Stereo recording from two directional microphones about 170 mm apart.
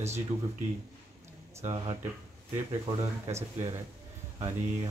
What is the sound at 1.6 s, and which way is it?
Speech, 40° right (ahead or behind).